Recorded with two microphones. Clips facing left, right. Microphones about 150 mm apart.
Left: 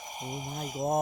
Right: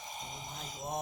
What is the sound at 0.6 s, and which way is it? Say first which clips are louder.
Mantra: left 14 dB; 10° left (ahead or behind).